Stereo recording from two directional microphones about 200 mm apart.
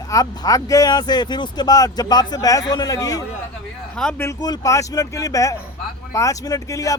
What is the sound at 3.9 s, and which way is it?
Speech, 5° left (ahead or behind).